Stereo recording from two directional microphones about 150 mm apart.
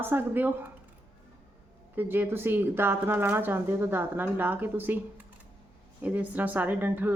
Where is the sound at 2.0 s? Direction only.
15° right (ahead or behind).